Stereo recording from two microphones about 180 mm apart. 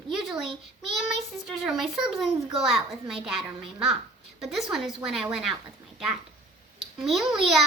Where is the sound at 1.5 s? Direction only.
Centre (ahead or behind).